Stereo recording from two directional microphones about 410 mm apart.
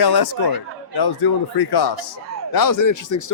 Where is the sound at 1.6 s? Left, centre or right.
Left.